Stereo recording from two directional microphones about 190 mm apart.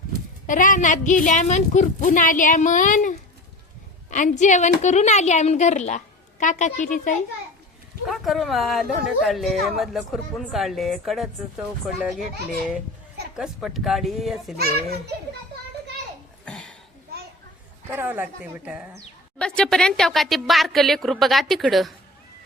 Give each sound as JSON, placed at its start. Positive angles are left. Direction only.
{"t": 0.4, "sound": "a woman's voice", "side_deg": 45}
{"t": 8.0, "sound": "speech", "side_deg": 0}
{"t": 13.3, "sound": "speech", "side_deg": 0}
{"t": 16.5, "sound": "a sound", "side_deg": 5}
{"t": 17.9, "sound": "speech", "side_deg": -10}
{"t": 19.4, "sound": "speech", "side_deg": 5}